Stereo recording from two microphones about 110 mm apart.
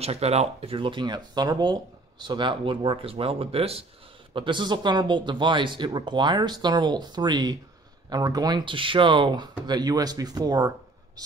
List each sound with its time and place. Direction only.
0.0 s speech: 75° right (ahead or behind)
4.3 s speech: 45° right (ahead or behind)